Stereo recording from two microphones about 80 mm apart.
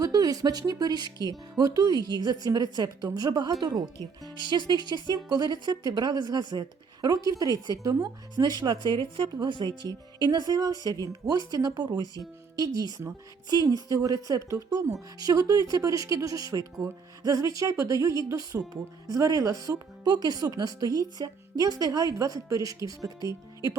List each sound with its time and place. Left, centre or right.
0.0 s speech: right
4.2 s speech: right
9.8 s speech: right
20.1 s speech: right